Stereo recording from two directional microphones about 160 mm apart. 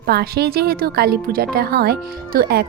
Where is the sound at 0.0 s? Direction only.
85° right.